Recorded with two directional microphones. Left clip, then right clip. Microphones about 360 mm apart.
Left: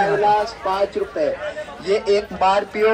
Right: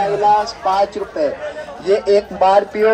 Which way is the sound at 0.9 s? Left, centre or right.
Right.